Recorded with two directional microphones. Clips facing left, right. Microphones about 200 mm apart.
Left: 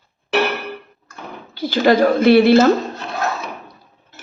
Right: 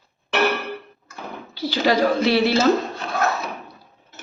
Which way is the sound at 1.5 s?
50° left (ahead or behind).